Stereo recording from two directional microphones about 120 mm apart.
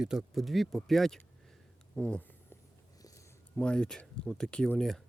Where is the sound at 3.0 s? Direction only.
30° left (ahead or behind).